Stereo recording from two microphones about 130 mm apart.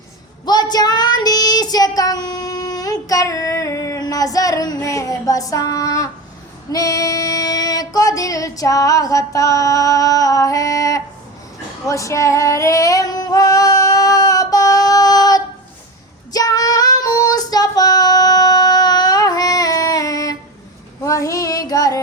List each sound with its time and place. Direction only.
0.4 s child singing: 30° left (ahead or behind)
6.7 s female singing: 25° left (ahead or behind)